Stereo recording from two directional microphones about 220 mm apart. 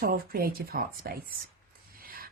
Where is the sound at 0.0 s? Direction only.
40° right (ahead or behind).